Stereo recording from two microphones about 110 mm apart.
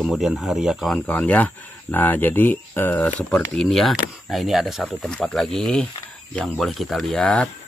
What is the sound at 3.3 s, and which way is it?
Speech, 5° left (ahead or behind).